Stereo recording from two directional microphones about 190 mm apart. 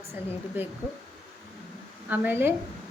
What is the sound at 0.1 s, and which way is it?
Speech, 10° right (ahead or behind).